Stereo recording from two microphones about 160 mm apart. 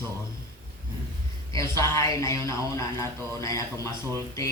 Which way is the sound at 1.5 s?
20° left (ahead or behind).